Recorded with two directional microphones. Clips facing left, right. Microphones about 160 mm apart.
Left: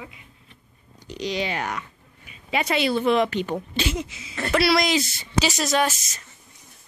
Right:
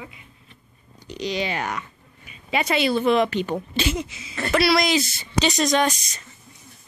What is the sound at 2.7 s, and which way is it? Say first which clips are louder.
Speech: right 1 dB; 25° right (ahead or behind).